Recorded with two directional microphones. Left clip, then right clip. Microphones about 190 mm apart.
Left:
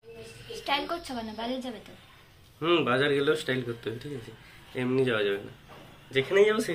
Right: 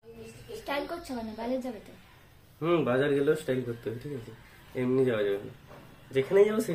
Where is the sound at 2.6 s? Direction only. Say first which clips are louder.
Left 2 dB; 10° right (ahead or behind).